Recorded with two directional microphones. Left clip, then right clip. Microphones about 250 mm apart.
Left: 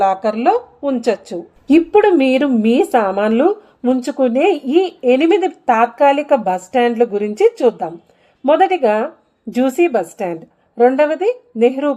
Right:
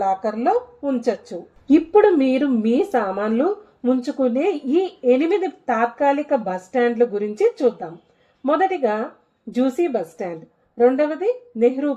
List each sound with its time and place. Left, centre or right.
0.0 s speech: left